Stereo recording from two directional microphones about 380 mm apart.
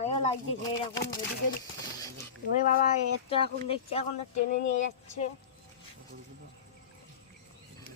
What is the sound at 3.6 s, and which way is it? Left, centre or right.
Speech, centre.